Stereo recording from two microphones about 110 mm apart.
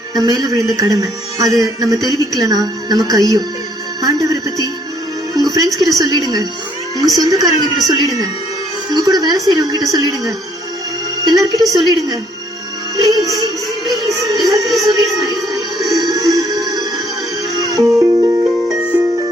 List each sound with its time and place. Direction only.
0.1 s a woman's voice: 35° right (ahead or behind)
5.3 s music: 35° right (ahead or behind)
6.0 s a woman's voice: 35° right (ahead or behind)
13.1 s music: 35° right (ahead or behind)
14.7 s a sound: centre (ahead or behind)
15.9 s music: 35° right (ahead or behind)
18.5 s music: 5° right (ahead or behind)